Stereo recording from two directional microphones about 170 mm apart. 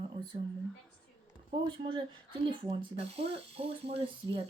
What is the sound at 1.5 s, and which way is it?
Speech, 30° right (ahead or behind).